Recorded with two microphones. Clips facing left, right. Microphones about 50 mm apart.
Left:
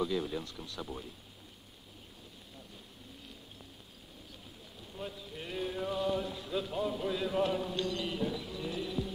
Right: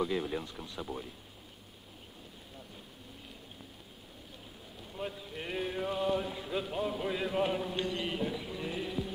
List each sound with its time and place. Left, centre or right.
0.0 s speech: right
4.9 s a man's voice: right